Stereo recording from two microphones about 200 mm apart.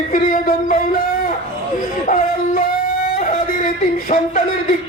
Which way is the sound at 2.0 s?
40° left (ahead or behind).